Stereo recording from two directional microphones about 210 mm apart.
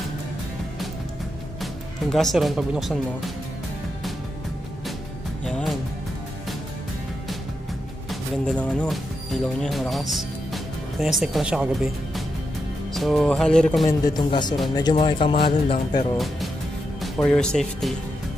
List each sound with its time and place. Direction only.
1.6 s speech: centre (ahead or behind)
5.4 s music: centre (ahead or behind)
8.1 s speech: 5° left (ahead or behind)
12.9 s speech: centre (ahead or behind)
13.8 s speech: 20° left (ahead or behind)
17.0 s speech: 5° left (ahead or behind)